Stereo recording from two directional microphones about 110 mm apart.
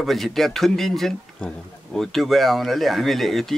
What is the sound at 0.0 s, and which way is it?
Speech, centre (ahead or behind).